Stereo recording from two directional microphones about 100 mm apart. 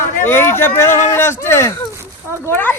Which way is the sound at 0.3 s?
25° left (ahead or behind).